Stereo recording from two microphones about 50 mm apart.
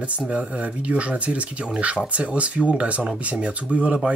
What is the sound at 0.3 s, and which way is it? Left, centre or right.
Speech, right.